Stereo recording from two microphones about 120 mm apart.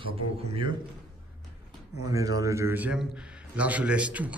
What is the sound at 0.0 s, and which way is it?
Speech, 50° right (ahead or behind).